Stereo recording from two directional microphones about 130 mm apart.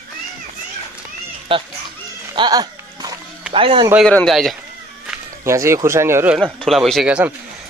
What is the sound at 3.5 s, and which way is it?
Speech, 45° right (ahead or behind).